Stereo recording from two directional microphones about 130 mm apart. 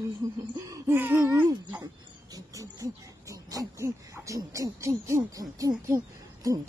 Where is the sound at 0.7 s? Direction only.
15° right (ahead or behind).